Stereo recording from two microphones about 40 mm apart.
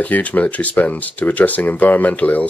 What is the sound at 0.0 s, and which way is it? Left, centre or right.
Speech, left.